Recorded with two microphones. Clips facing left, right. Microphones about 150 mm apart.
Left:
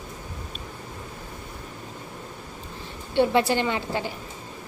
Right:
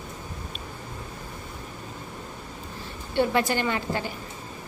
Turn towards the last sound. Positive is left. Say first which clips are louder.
# left 2 dB
turn(degrees=20)  # may be behind; listen again after turning